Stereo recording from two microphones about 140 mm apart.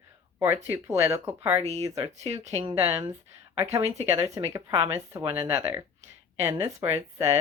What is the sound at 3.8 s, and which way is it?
Speech, 50° right (ahead or behind).